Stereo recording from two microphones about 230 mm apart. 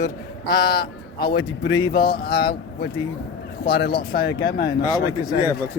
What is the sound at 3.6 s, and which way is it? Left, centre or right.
Speech, left.